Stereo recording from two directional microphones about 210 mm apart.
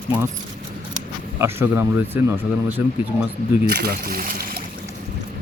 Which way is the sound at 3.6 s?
50° right (ahead or behind).